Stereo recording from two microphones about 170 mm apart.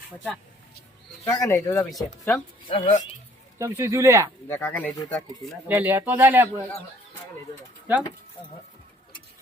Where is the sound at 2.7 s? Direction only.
30° left (ahead or behind).